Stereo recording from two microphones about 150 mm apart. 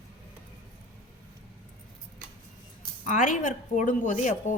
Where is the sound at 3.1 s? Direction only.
60° left (ahead or behind).